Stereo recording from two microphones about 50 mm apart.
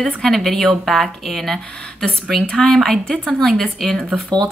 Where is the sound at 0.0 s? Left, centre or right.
Centre.